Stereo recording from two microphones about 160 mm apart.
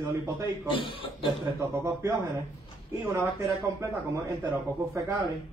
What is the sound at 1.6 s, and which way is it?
A man's voice, 20° right (ahead or behind).